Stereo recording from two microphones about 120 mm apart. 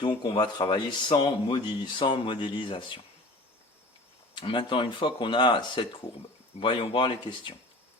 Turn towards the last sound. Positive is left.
turn(degrees=45)  # may be behind; listen again after turning